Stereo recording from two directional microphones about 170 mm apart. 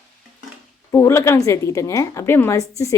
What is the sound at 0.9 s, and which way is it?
Speech, 20° left (ahead or behind).